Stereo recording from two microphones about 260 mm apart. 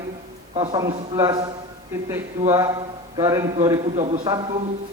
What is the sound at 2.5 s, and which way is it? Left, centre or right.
A man's voice, centre.